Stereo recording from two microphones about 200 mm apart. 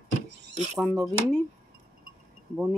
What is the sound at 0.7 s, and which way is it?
Speech, centre (ahead or behind).